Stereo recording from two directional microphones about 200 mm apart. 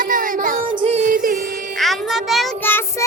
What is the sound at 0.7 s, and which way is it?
Music, 30° right (ahead or behind).